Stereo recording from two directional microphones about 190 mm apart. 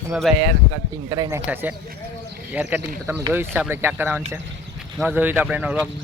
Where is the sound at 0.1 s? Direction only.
Centre (ahead or behind).